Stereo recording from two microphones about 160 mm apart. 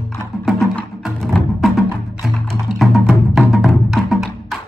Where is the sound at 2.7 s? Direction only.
Centre (ahead or behind).